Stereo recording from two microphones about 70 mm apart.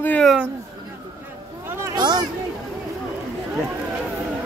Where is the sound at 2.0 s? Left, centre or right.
Right.